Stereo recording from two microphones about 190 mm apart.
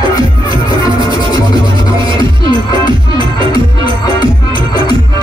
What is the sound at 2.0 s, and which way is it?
Music, 25° right (ahead or behind).